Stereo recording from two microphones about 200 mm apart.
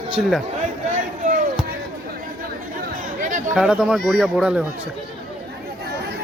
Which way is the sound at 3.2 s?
40° right (ahead or behind).